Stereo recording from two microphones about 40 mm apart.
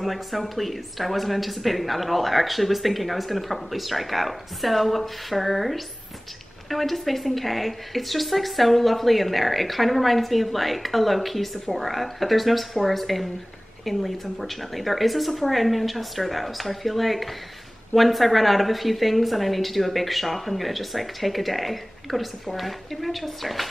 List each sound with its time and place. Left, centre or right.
0.0 s a woman's voice: centre